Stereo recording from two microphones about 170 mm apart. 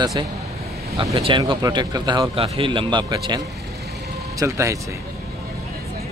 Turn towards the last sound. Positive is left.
turn(degrees=-15)  # may be behind; listen again after turning